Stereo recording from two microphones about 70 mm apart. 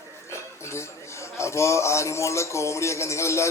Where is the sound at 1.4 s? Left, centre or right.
Left.